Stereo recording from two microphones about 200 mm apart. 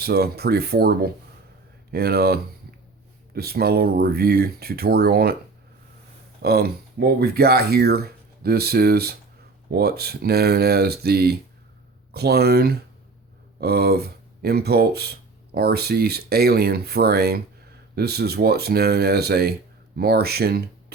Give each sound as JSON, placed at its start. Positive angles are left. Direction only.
{"t": 0.0, "sound": "speech", "side_deg": -50}
{"t": 6.4, "sound": "speech", "side_deg": -50}